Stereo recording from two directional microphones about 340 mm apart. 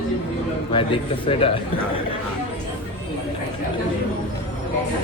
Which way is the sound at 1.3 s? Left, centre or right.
Centre.